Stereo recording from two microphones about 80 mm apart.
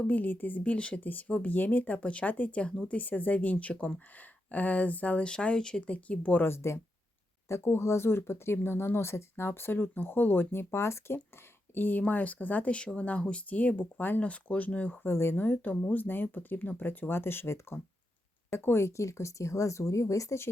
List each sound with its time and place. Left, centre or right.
0.0 s speech: left
6.5 s speech: left; by 14.9 s centre
15.0 s speech: left